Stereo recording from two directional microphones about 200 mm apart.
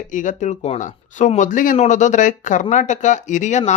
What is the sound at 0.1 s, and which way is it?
Speech, 40° left (ahead or behind).